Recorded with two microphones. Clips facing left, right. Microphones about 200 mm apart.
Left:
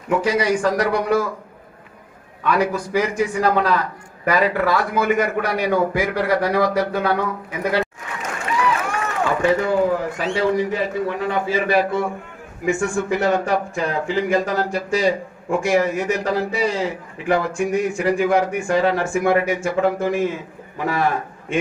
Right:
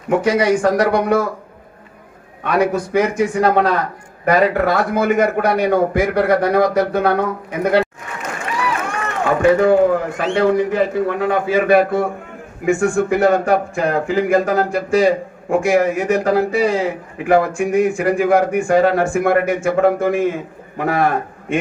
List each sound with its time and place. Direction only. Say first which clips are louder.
0.3 s a man's voice: right 5 dB; 50° right (ahead or behind)
2.4 s a man's voice: right 3 dB; 55° right (ahead or behind)
9.5 s a man's voice: right 7 dB; 55° right (ahead or behind)